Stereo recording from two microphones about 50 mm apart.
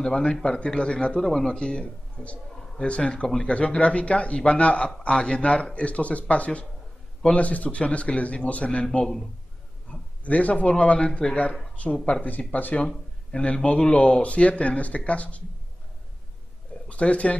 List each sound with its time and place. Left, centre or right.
0.1 s speech: centre
9.8 s a man's voice: left
12.8 s speech: centre
16.9 s speech: left